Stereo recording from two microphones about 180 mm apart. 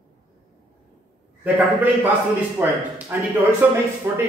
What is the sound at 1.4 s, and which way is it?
Speech, 10° right (ahead or behind).